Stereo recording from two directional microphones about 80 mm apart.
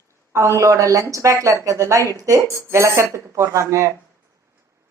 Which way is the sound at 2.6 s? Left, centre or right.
Right.